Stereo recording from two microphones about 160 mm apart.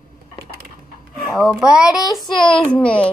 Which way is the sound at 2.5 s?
5° left (ahead or behind).